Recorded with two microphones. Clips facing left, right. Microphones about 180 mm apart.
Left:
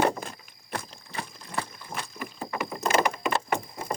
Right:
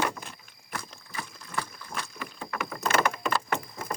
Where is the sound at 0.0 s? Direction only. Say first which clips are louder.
Left 6 dB; 40° left (ahead or behind).